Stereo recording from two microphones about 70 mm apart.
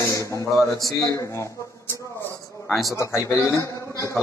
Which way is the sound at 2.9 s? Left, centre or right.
Left.